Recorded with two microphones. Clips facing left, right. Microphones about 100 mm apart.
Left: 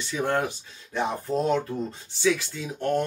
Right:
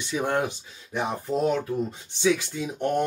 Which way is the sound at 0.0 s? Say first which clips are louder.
Even; 15° right (ahead or behind).